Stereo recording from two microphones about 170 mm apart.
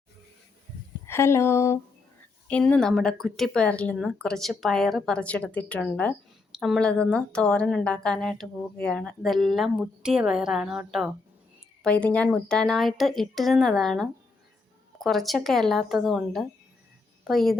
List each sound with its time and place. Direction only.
1.0 s a woman's voice: 15° left (ahead or behind); by 11.1 s 5° right (ahead or behind)
11.8 s a woman's voice: 5° left (ahead or behind)